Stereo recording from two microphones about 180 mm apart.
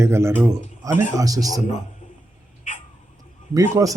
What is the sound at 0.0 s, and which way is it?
A man's voice, 15° right (ahead or behind).